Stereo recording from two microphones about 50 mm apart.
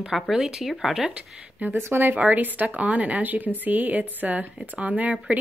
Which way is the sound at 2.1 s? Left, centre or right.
Right.